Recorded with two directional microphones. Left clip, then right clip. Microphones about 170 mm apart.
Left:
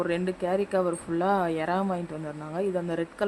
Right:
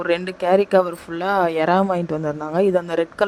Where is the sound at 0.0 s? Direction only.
50° right (ahead or behind).